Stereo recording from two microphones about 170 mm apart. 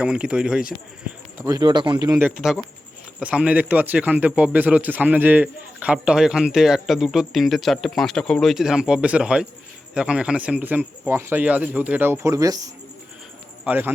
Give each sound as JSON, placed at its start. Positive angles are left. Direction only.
{"t": 0.0, "sound": "a man's voice", "side_deg": -5}
{"t": 1.4, "sound": "a man's voice", "side_deg": -20}